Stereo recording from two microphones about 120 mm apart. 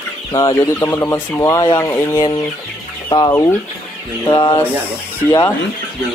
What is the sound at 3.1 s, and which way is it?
Chicken, 35° left (ahead or behind).